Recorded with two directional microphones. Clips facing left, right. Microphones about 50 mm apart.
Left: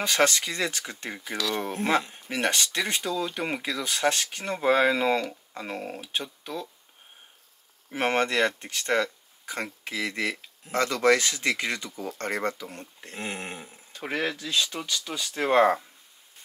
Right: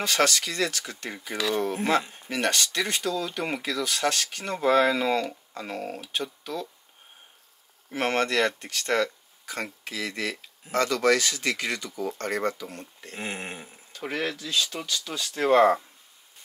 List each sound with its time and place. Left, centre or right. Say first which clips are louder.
0.0 s speech: left 1 dB; left
1.1 s speech: right 3 dB; centre
7.9 s speech: even; left
13.1 s a sound: even; centre
13.9 s speech: left 1 dB; left